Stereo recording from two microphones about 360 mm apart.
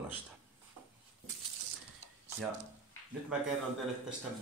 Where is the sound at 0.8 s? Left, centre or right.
Right.